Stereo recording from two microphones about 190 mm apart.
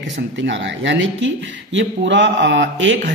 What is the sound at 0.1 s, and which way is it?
Speech, 70° right (ahead or behind).